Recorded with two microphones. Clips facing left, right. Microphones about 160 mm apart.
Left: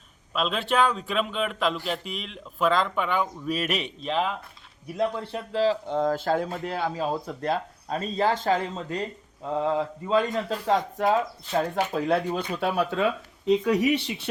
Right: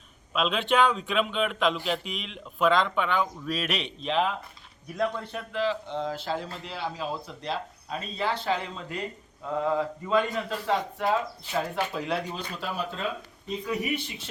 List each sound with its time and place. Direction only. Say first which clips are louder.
0.3 s speech: even; centre (ahead or behind)
5.2 s speech: left 5 dB; 30° left (ahead or behind)
9.6 s speech: left 1 dB; 25° left (ahead or behind); by 14.3 s 85° left